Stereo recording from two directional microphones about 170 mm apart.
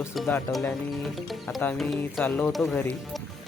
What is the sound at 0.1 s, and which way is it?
Speech, centre (ahead or behind).